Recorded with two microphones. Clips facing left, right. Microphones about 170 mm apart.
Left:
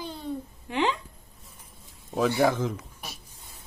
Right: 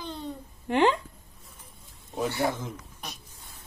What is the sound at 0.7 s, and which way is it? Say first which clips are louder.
Speech: right 4 dB; 55° right (ahead or behind).